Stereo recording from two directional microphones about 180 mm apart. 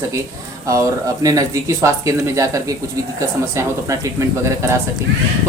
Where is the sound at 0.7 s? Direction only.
20° right (ahead or behind).